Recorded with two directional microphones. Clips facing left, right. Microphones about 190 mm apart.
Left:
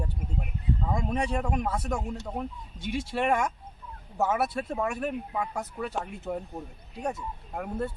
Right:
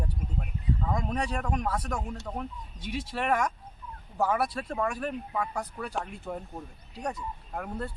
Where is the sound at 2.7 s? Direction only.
25° left (ahead or behind).